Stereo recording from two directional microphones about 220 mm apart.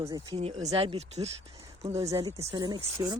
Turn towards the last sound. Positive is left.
turn(degrees=-20)  # may be behind; listen again after turning